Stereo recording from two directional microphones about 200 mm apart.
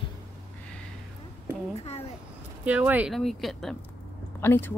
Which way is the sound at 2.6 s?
5° right (ahead or behind).